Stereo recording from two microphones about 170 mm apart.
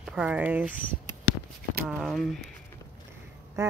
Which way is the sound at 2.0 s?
Centre (ahead or behind).